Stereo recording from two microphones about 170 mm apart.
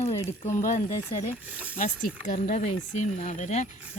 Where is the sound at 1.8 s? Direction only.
50° left (ahead or behind).